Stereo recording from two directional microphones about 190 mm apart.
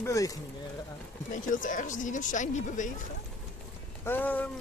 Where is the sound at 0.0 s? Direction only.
15° left (ahead or behind).